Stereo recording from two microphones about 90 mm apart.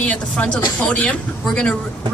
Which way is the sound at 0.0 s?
15° left (ahead or behind).